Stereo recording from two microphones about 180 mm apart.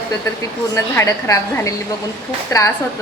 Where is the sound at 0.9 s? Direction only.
15° left (ahead or behind).